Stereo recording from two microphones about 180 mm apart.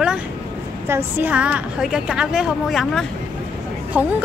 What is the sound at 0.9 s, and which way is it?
A woman's voice, 10° right (ahead or behind).